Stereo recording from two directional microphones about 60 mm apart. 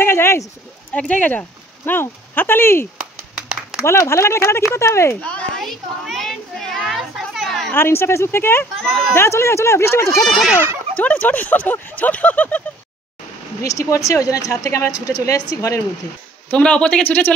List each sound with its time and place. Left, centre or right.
0.0 s a sound: left
0.9 s speech: left
1.9 s speech: left
5.2 s speech: left
5.6 s children playing: centre
7.7 s speech: left
8.8 s speech: centre
9.1 s speech: left
11.0 s speech: left
13.6 s speech: left
16.5 s speech: left